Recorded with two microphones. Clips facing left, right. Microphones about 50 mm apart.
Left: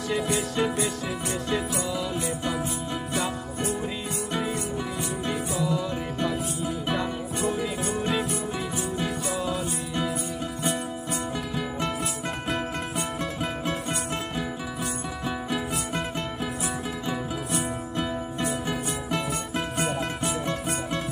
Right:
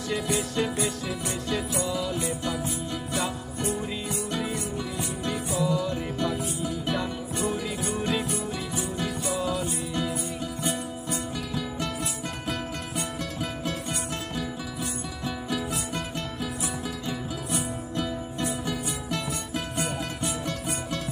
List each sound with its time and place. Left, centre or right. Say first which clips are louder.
0.6 s music: left 3 dB; centre
1.9 s music: even; centre
5.6 s music: right 1 dB; centre
8.1 s music: left 1 dB; centre
9.4 s music: right 2 dB; centre
10.6 s music: left 3 dB; left
18.7 s music: left 2 dB; centre
19.8 s music: left 3 dB; left